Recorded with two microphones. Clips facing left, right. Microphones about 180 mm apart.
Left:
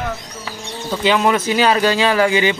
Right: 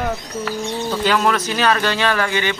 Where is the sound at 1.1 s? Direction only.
10° left (ahead or behind).